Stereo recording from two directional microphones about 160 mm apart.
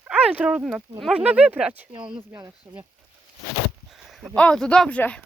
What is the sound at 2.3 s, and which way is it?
Speech, 20° right (ahead or behind).